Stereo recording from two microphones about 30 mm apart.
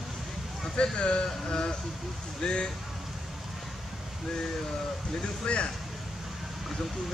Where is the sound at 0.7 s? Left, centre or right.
Left.